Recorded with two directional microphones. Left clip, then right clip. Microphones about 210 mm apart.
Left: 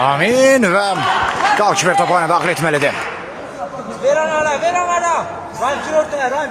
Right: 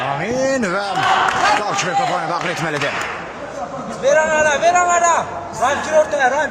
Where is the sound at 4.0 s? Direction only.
30° right (ahead or behind).